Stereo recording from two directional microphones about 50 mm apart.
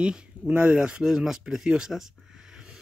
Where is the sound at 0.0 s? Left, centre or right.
Right.